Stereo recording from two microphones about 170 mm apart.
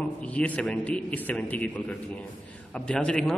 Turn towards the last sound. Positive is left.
turn(degrees=5)  # may be behind; listen again after turning